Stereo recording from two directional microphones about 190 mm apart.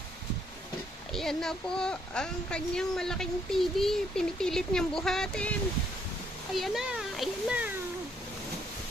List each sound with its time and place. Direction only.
1.1 s speech: centre (ahead or behind)
6.6 s a child's voice: centre (ahead or behind)